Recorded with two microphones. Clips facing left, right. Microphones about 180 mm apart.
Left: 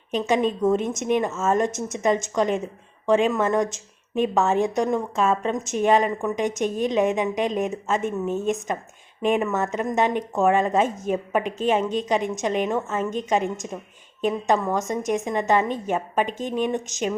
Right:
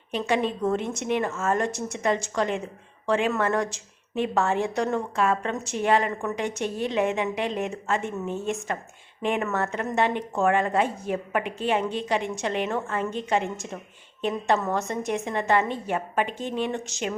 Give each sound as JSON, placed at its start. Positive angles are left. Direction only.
{"t": 0.1, "sound": "a woman's voice", "side_deg": 20}